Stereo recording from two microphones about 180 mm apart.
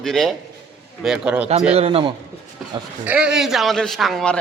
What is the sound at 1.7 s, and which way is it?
Speech, 35° right (ahead or behind).